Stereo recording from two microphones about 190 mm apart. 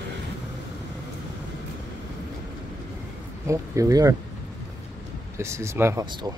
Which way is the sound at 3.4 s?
15° right (ahead or behind).